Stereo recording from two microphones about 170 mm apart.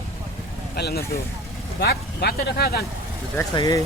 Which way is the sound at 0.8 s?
70° left (ahead or behind).